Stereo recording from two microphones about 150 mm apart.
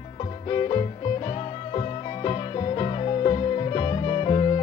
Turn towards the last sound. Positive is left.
turn(degrees=35)  # may be behind; listen again after turning